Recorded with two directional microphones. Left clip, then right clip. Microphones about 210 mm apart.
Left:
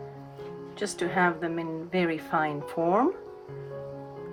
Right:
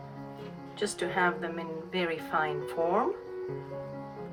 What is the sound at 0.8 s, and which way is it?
A woman's voice, 25° left (ahead or behind).